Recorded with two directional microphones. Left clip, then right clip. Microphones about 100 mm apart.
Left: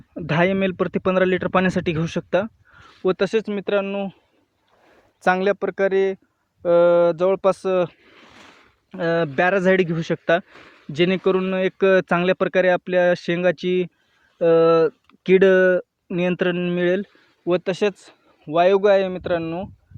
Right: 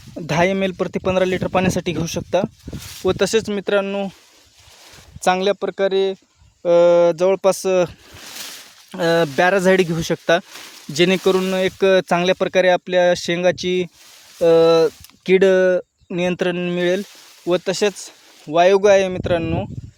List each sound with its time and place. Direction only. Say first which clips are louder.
0.2 s speech: right 2 dB; 20° right (ahead or behind)
3.0 s speech: right 2 dB; 35° right (ahead or behind)
3.2 s speech: right 3 dB; 55° right (ahead or behind)
5.2 s speech: right 2 dB; 25° right (ahead or behind)
6.6 s speech: right 3 dB; 35° right (ahead or behind); by 7.9 s 60° right (ahead or behind)
8.9 s speech: right 4 dB; 55° right (ahead or behind)